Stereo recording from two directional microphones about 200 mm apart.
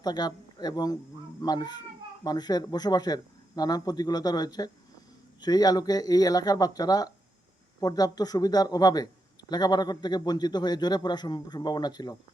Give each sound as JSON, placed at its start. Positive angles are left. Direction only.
{"t": 0.0, "sound": "speech", "side_deg": 20}